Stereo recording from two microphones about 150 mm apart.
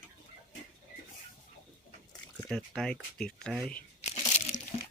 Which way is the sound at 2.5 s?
Centre (ahead or behind).